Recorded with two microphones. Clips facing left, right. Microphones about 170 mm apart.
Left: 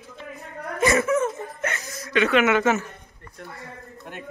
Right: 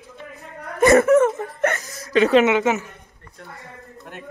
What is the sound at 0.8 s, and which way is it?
Speech, 55° right (ahead or behind).